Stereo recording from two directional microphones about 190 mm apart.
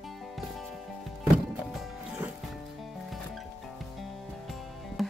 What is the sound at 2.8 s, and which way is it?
Music, centre (ahead or behind).